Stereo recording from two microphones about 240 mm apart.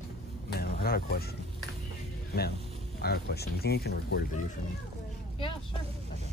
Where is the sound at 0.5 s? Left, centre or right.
Left.